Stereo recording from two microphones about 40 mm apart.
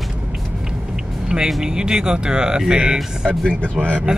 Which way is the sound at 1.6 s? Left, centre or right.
Centre.